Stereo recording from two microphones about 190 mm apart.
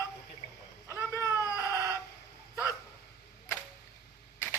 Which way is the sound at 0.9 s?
15° left (ahead or behind).